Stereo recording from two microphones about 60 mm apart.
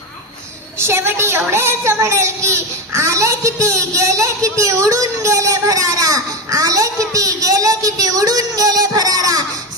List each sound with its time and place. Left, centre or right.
0.8 s a woman's voice: right